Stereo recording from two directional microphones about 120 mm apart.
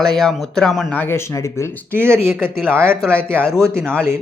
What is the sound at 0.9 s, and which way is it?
Speech, 15° left (ahead or behind).